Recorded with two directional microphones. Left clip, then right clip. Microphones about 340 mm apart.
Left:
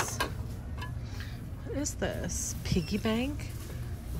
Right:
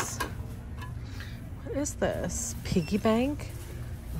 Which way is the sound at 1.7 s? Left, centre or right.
Centre.